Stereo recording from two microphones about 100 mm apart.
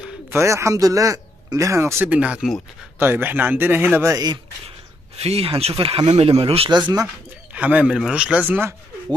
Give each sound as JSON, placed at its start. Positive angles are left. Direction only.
{"t": 0.3, "sound": "speech", "side_deg": -25}
{"t": 2.0, "sound": "a man's voice", "side_deg": -10}
{"t": 5.1, "sound": "speech", "side_deg": -90}
{"t": 7.5, "sound": "a man's voice", "side_deg": -10}